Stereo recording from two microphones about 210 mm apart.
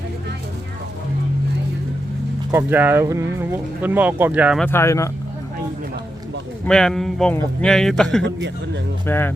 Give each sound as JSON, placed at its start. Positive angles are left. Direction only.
{"t": 2.5, "sound": "speech", "side_deg": -10}
{"t": 4.6, "sound": "speech", "side_deg": 10}
{"t": 6.7, "sound": "a man's voice", "side_deg": 5}
{"t": 8.2, "sound": "a man's voice", "side_deg": -55}
{"t": 9.0, "sound": "speech", "side_deg": 10}